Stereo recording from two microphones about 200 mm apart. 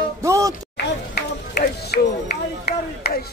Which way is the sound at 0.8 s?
55° left (ahead or behind).